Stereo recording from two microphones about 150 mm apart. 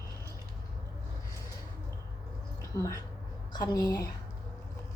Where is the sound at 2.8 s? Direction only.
20° left (ahead or behind).